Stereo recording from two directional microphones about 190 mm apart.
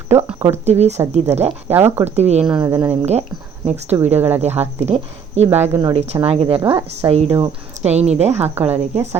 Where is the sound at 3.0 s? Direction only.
35° right (ahead or behind).